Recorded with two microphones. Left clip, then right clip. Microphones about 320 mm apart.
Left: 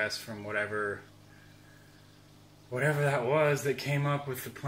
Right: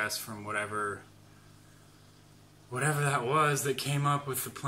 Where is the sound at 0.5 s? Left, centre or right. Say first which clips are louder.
Left 1 dB; right.